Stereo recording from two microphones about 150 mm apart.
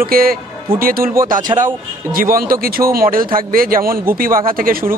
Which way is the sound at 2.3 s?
75° right (ahead or behind).